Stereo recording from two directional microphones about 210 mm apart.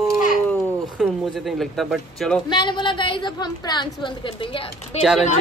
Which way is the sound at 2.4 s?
20° left (ahead or behind).